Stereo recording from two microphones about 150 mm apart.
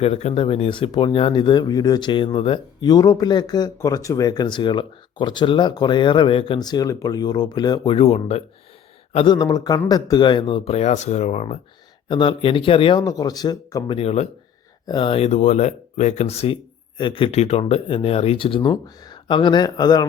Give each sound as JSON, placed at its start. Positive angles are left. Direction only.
{"t": 0.0, "sound": "speech", "side_deg": 45}
{"t": 7.9, "sound": "speech", "side_deg": 40}
{"t": 9.1, "sound": "speech", "side_deg": 30}
{"t": 12.0, "sound": "speech", "side_deg": 30}
{"t": 13.0, "sound": "speech", "side_deg": 25}
{"t": 14.8, "sound": "speech", "side_deg": 30}